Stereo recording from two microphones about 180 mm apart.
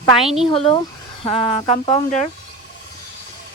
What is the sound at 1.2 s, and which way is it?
Speech, 25° left (ahead or behind).